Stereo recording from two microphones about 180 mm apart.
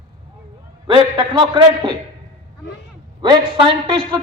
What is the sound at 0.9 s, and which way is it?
A man's voice, 25° right (ahead or behind).